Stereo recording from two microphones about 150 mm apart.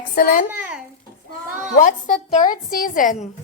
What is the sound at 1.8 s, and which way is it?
A woman's voice, 55° left (ahead or behind).